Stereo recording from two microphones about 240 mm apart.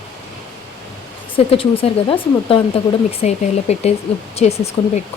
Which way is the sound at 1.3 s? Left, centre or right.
Left.